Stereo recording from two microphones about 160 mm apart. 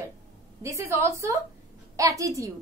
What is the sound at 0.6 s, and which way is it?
A woman's voice, 20° right (ahead or behind).